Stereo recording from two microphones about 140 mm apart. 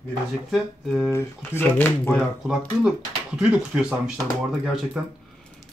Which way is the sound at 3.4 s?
5° right (ahead or behind).